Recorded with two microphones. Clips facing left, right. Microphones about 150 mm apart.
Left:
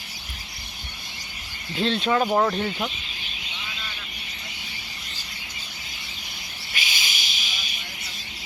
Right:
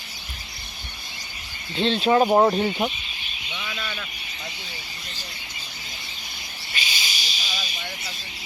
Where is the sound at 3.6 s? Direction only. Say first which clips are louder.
Right 8 dB; 85° right.